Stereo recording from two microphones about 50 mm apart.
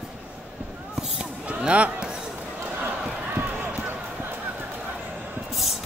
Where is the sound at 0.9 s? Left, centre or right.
Centre.